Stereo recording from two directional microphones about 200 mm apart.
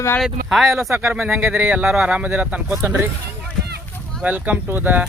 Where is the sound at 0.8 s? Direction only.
15° right (ahead or behind).